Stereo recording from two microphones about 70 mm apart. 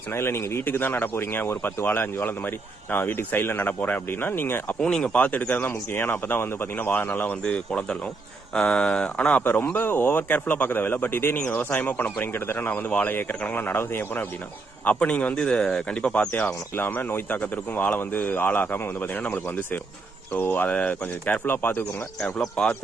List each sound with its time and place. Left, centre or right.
0.1 s speech: left
4.8 s speech: centre; by 11.3 s left
11.3 s speech: centre
16.5 s speech: left
22.2 s speech: centre